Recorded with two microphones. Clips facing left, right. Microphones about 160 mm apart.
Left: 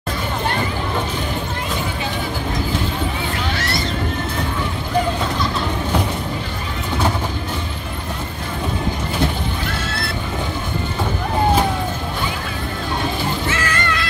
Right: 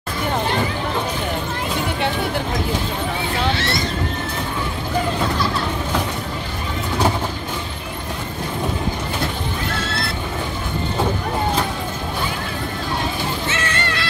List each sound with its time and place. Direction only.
13.5 s music: 30° right (ahead or behind)